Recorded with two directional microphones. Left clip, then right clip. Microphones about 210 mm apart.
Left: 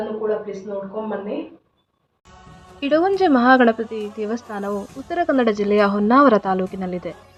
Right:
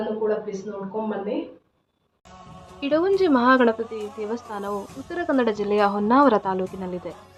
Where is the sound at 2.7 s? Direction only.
10° left (ahead or behind).